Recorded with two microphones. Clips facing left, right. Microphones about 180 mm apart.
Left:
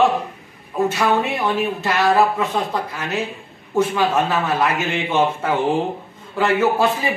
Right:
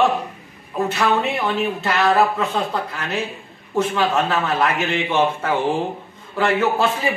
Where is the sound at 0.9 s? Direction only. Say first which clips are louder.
Left 1 dB; 10° left (ahead or behind).